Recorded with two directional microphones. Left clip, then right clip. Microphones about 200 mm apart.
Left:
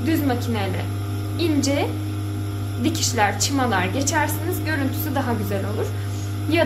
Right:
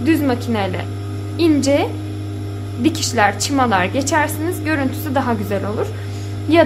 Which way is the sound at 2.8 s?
45° right (ahead or behind).